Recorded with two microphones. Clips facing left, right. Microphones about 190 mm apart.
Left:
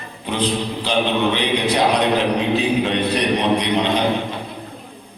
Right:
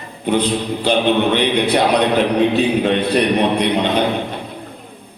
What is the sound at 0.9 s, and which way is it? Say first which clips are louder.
Speech: right 4 dB; 55° right (ahead or behind).